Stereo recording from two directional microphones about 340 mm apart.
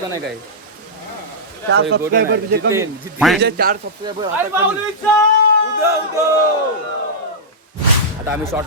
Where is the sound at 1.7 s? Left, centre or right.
Right.